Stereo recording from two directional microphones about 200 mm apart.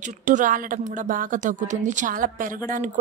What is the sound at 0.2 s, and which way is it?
A woman's voice, 40° right (ahead or behind).